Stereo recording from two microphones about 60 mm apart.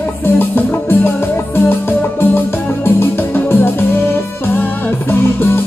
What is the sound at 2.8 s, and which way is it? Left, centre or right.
Music, left.